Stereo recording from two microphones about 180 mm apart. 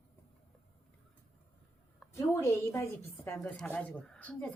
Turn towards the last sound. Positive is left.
turn(degrees=5)  # may be behind; listen again after turning